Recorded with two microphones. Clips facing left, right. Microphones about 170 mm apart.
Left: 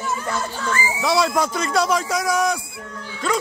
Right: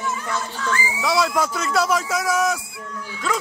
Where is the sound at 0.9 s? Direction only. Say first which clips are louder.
Left 1 dB; centre (ahead or behind).